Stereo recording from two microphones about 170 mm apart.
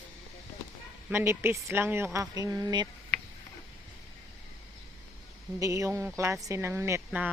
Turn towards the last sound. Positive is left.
turn(degrees=-10)  # may be behind; listen again after turning